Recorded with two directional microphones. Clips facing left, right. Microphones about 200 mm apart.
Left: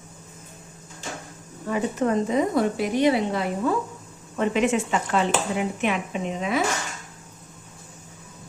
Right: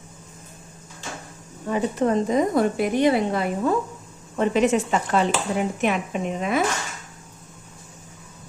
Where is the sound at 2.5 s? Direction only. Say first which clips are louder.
Right 2 dB; 50° right (ahead or behind).